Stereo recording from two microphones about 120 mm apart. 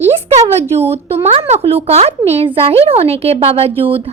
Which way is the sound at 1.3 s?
60° right (ahead or behind).